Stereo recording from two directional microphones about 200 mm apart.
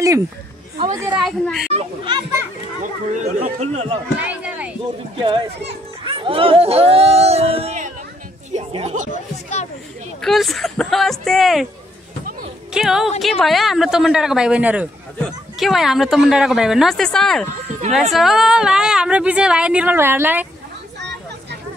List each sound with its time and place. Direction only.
0.7 s a woman's voice: 25° right (ahead or behind)
1.2 s speech: centre (ahead or behind)
1.7 s a child's voice: 25° right (ahead or behind)
2.8 s speech: 40° right (ahead or behind)
4.2 s a sound: 5° right (ahead or behind)
6.0 s speech: 25° right (ahead or behind)
10.2 s speech: centre (ahead or behind)
12.7 s speech: centre (ahead or behind)
17.5 s speech: 35° right (ahead or behind)
18.1 s speech: centre (ahead or behind)